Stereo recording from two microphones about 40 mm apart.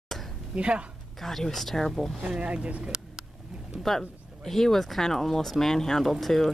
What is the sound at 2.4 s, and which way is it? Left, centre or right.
Speech, right.